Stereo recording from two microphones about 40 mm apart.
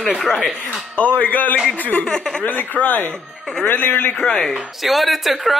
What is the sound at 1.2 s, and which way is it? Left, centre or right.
Speech, left.